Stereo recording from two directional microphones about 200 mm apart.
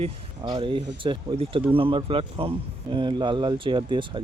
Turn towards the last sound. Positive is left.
turn(degrees=-25)  # may be behind; listen again after turning